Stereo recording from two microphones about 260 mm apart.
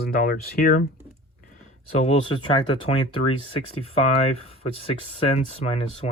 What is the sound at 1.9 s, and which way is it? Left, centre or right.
Speech, left.